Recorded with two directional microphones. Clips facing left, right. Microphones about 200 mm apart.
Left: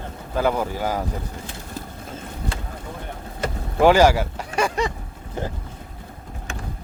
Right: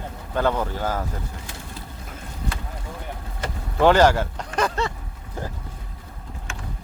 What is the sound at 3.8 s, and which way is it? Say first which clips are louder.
Speech: left 1 dB; 10° left (ahead or behind).